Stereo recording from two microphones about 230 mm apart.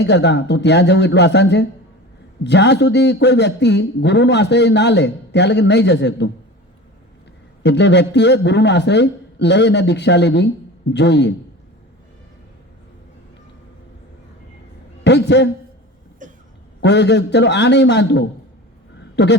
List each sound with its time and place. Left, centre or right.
0.0 s a man's voice: left
7.6 s a man's voice: left
15.0 s a sound: left
16.2 s cough: right
16.8 s a man's voice: left
18.9 s a sound: left